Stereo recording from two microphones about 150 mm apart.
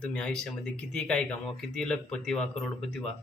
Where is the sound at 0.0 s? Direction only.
5° left (ahead or behind).